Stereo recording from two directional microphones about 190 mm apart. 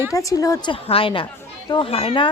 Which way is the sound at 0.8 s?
30° left (ahead or behind).